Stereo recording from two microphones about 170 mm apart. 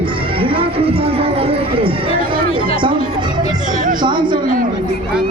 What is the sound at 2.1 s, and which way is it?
Crowd, 60° right (ahead or behind).